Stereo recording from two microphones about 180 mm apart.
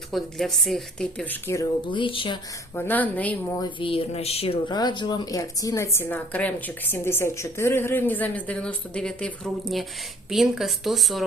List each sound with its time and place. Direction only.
0.1 s speech: centre (ahead or behind)
1.9 s speech: 30° left (ahead or behind)
2.7 s speech: 10° left (ahead or behind)
3.6 s speech: 30° left (ahead or behind); by 11.3 s centre (ahead or behind)